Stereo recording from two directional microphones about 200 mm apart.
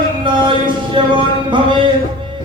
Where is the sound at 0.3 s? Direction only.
25° right (ahead or behind).